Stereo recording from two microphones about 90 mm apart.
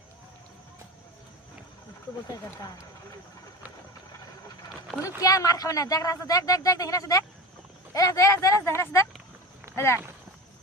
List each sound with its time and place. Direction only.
2.2 s speech: 40° left (ahead or behind)
5.0 s speech: 40° left (ahead or behind)